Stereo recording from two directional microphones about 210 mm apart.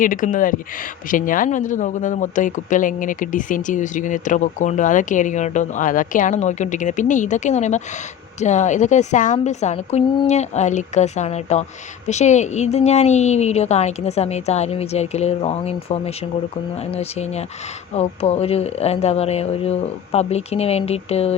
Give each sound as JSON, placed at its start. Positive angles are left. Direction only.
{"t": 0.0, "sound": "speech", "side_deg": 40}